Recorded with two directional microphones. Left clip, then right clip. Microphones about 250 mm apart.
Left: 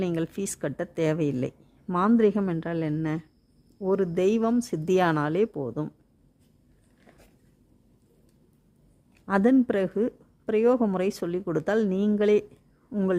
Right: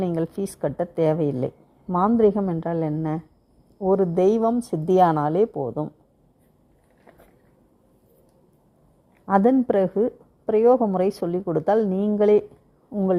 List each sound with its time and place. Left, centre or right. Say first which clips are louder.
0.0 s a woman's voice: right 4 dB; centre
5.6 s speech: right 5 dB; left
9.2 s a woman's voice: right 4 dB; centre